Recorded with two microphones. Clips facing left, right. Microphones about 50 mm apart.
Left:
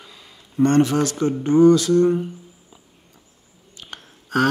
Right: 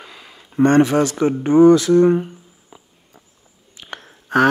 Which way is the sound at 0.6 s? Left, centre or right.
Right.